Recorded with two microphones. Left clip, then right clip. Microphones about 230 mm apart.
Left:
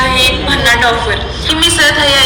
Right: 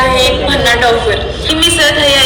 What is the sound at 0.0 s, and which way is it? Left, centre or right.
A woman's voice, centre.